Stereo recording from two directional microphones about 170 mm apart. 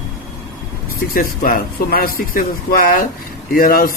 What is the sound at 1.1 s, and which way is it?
Speech, 55° left (ahead or behind).